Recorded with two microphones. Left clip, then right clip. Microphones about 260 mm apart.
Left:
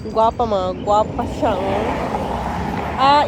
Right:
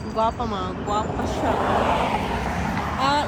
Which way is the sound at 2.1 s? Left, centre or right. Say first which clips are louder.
Left 2 dB; right.